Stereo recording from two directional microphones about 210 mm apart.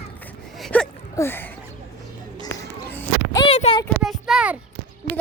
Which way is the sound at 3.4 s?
25° left (ahead or behind).